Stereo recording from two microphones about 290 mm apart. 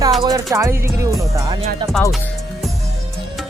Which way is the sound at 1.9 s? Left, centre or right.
Centre.